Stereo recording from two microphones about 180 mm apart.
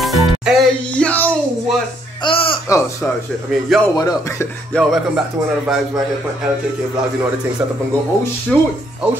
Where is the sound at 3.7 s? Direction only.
Centre (ahead or behind).